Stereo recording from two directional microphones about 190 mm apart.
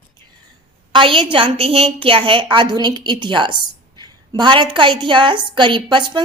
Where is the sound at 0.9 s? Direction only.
25° right (ahead or behind).